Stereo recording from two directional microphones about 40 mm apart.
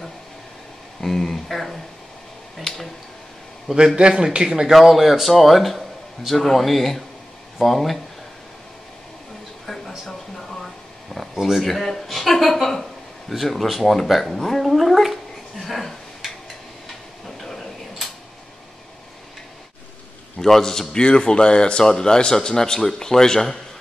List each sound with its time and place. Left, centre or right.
1.0 s a man's voice: centre
3.7 s a man's voice: right
4.7 s a man's voice: centre
9.7 s a sound: centre
11.3 s speech: centre
11.6 s a man's voice: centre
15.6 s a sound: centre
17.4 s a sound: centre
20.3 s speech: centre
20.9 s speech: left